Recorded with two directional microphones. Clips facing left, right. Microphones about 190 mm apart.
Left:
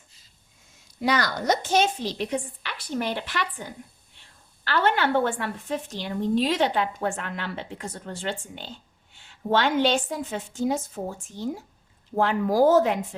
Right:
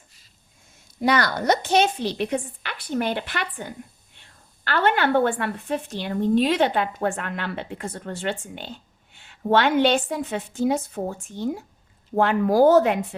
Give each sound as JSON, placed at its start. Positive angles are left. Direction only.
{"t": 1.0, "sound": "a woman's voice", "side_deg": -60}